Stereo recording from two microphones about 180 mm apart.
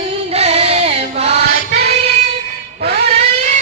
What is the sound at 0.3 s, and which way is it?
Chant, 35° right (ahead or behind).